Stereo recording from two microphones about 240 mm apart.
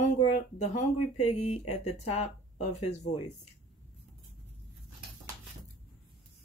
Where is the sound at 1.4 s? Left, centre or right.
Left.